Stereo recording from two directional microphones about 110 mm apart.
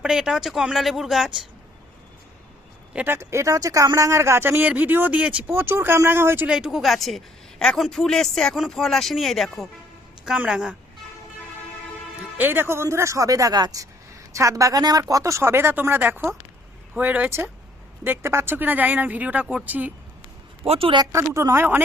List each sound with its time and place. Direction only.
0.0 s speech: 5° right (ahead or behind)
2.9 s speech: 15° right (ahead or behind)
6.5 s speech: 5° right (ahead or behind)
12.4 s speech: 20° right (ahead or behind)
20.7 s speech: 55° right (ahead or behind)
21.0 s speech: 25° right (ahead or behind)